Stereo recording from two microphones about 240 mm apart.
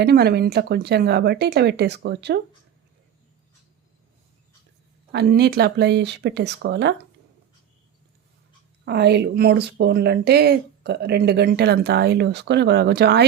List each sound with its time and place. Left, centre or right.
0.0 s speech: right
5.1 s speech: right
8.8 s speech: right